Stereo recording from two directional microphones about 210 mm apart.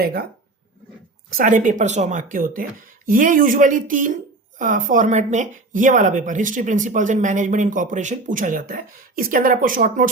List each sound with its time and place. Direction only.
0.0 s speech: 45° right (ahead or behind)
1.3 s a woman's voice: 40° right (ahead or behind)